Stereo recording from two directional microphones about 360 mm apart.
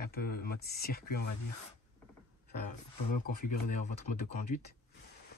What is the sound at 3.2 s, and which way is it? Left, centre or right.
Speech, left.